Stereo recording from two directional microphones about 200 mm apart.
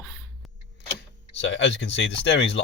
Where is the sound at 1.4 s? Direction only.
65° left (ahead or behind).